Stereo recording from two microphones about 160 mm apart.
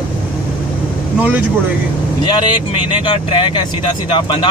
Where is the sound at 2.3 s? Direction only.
25° left (ahead or behind).